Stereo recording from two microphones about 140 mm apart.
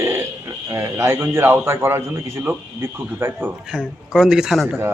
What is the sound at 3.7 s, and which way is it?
A man's voice, 5° right (ahead or behind).